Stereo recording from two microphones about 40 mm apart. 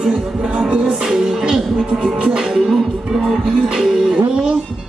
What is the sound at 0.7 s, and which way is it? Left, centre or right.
Music, right.